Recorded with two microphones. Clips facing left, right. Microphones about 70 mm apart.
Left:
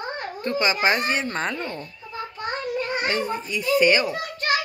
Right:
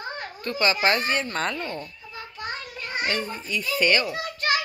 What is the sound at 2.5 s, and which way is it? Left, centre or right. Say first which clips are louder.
Child singing: left 8 dB; left.